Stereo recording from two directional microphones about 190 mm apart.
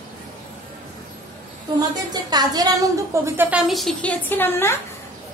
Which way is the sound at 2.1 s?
20° right (ahead or behind).